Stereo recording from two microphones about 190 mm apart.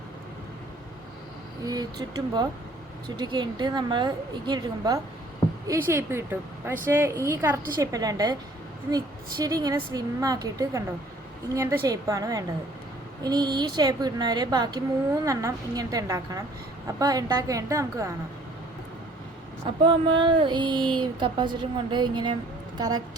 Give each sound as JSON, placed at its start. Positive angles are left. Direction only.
{"t": 1.6, "sound": "a woman's voice", "side_deg": -20}
{"t": 19.8, "sound": "speech", "side_deg": -25}